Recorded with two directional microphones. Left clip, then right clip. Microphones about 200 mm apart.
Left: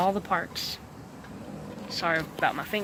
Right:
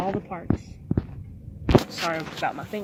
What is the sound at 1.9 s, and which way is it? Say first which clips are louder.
Speech: even; 5° left (ahead or behind).